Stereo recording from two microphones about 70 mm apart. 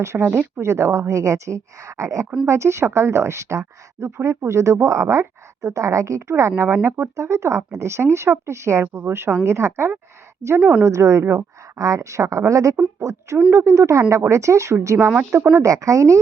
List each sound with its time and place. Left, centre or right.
0.0 s a woman's voice: right
6.8 s speech: right
7.2 s a woman's voice: right
8.9 s speech: right
10.6 s speech: right
10.8 s a woman's voice: right
15.1 s speech: right
15.5 s a woman's voice: right